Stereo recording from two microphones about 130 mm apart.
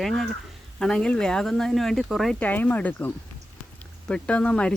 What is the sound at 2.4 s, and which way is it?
Speech, 10° left (ahead or behind).